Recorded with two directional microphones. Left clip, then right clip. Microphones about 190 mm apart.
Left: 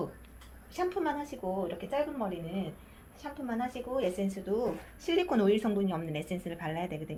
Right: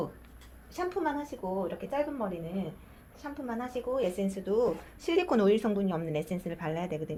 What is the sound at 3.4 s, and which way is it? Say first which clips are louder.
A woman's voice: even; 35° right (ahead or behind).